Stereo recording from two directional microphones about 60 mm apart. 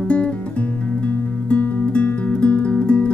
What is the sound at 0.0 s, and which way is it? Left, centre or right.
Music, centre.